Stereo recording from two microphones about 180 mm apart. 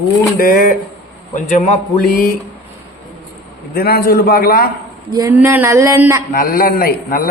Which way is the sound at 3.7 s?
55° left (ahead or behind).